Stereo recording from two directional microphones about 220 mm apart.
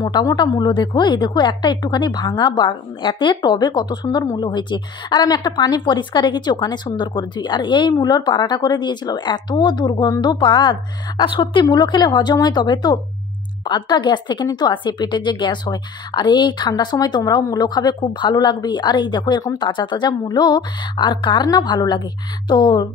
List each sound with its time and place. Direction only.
0.0 s a woman's voice: 15° left (ahead or behind)